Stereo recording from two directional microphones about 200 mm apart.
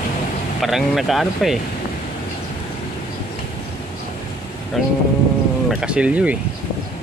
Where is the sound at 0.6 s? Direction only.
Centre (ahead or behind).